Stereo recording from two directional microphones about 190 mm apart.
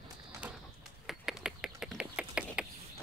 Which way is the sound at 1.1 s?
Centre (ahead or behind).